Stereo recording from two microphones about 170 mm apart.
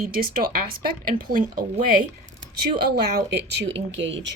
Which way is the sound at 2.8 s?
70° right (ahead or behind).